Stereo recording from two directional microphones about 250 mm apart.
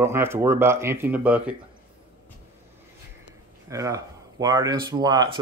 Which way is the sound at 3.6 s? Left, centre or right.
Centre.